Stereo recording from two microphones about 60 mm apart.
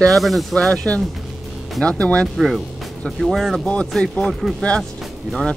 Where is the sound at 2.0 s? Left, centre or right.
Centre.